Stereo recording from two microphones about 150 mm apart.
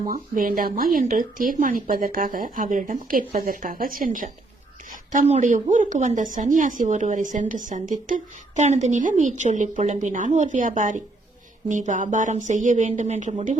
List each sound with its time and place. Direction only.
0.1 s speech: 70° right (ahead or behind)
4.9 s a woman's voice: 55° right (ahead or behind)